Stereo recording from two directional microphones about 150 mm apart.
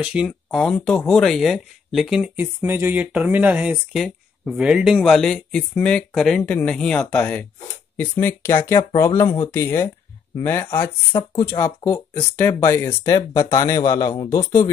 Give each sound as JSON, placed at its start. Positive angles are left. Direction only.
{"t": 0.0, "sound": "speech", "side_deg": -5}